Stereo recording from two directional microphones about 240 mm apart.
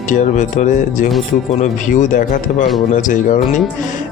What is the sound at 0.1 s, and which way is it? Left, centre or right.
Speech, left.